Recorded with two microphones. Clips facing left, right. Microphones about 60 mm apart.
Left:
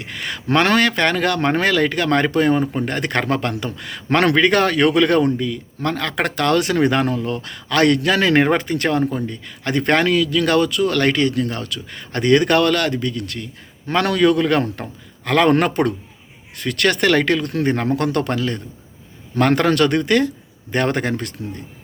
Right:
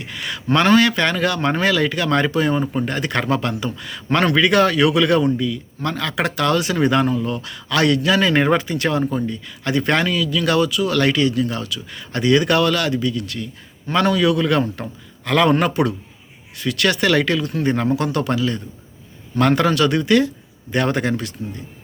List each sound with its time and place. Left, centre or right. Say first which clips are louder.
0.0 s speech: even; left
0.5 s speech: right 1 dB; left
3.8 s speech: left 2 dB; left
4.4 s speech: even; left
9.0 s speech: right 1 dB; left
10.1 s a man's voice: left 3 dB; left